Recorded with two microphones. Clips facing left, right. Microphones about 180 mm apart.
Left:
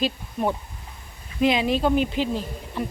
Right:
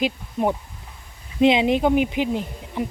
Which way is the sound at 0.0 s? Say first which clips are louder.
Right 2 dB; 15° right (ahead or behind).